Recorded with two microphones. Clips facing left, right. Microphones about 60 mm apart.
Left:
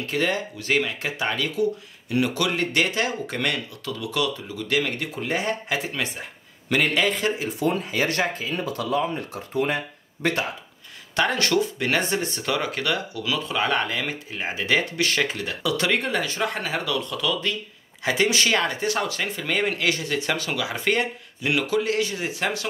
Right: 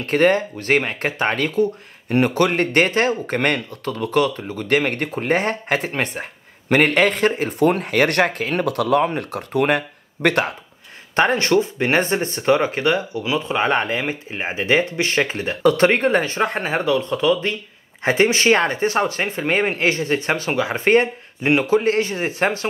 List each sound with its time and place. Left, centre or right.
0.0 s speech: right
11.1 s speech: right